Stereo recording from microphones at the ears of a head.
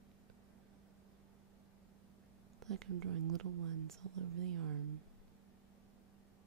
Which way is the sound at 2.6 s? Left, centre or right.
Right.